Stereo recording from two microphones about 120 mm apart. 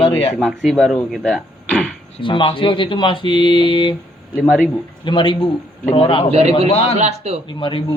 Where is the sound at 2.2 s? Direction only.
45° left (ahead or behind).